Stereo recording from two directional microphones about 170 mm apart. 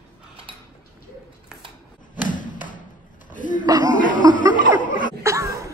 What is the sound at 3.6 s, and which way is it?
Speech, 25° right (ahead or behind).